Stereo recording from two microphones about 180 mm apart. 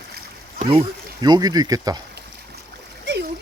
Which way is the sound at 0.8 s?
20° right (ahead or behind).